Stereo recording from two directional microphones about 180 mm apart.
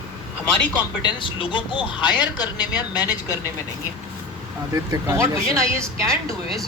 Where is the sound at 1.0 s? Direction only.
25° left (ahead or behind).